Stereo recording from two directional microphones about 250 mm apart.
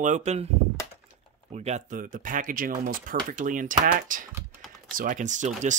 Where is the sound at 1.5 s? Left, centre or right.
Right.